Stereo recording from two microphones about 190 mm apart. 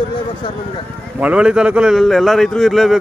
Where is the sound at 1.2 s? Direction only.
5° right (ahead or behind).